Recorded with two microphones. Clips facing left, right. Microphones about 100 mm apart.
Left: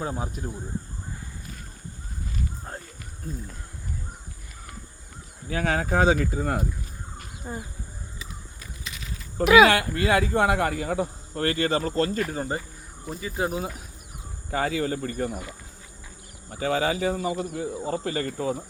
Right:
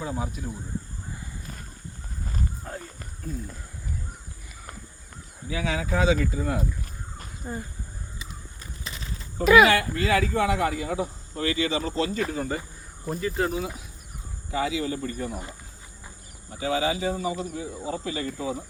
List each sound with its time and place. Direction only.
0.0 s speech: 35° left (ahead or behind)
5.5 s speech: 55° left (ahead or behind)
7.4 s speech: 10° left (ahead or behind)
8.8 s pulleys: 35° right (ahead or behind)
9.6 s speech: 60° left (ahead or behind)
12.3 s speech: 35° left (ahead or behind)
13.1 s speech: 10° left (ahead or behind)
14.5 s speech: 55° left (ahead or behind)
16.6 s speech: 55° left (ahead or behind)